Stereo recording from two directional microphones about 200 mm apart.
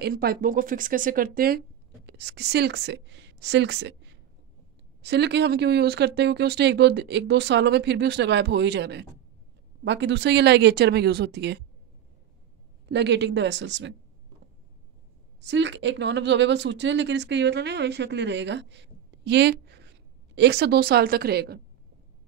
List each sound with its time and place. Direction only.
0.0 s speech: 50° right (ahead or behind)
2.0 s a woman's voice: 60° right (ahead or behind)
5.0 s speech: 60° right (ahead or behind)
12.8 s speech: 60° right (ahead or behind)
15.4 s speech: 65° right (ahead or behind)